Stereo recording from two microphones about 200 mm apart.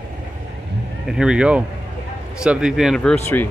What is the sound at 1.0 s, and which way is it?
Speech, 5° right (ahead or behind).